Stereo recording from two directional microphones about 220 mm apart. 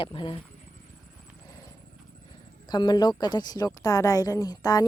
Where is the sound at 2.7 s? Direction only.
20° left (ahead or behind).